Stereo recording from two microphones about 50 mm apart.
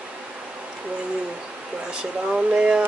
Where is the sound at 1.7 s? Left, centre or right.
Centre.